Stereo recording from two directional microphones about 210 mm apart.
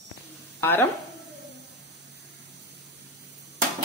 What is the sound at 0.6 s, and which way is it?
Speech, 10° left (ahead or behind).